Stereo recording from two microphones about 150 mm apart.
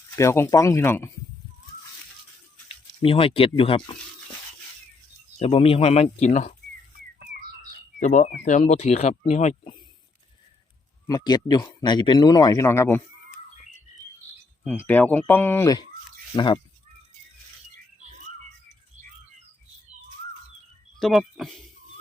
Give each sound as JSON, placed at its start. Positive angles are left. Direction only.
{"t": 0.2, "sound": "speech", "side_deg": 20}
{"t": 2.6, "sound": "speech", "side_deg": 35}
{"t": 5.4, "sound": "speech", "side_deg": 40}
{"t": 7.9, "sound": "speech", "side_deg": 55}
{"t": 11.0, "sound": "speech", "side_deg": 25}
{"t": 14.6, "sound": "speech", "side_deg": 10}
{"t": 21.0, "sound": "speech", "side_deg": 0}